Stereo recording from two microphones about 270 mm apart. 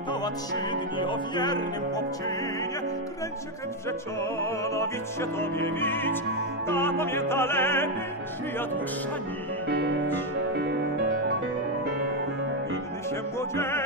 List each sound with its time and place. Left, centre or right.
0.9 s music: centre
4.4 s music: centre
13.6 s music: centre